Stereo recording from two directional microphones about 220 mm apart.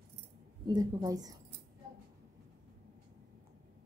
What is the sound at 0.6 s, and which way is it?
Speech, 15° right (ahead or behind).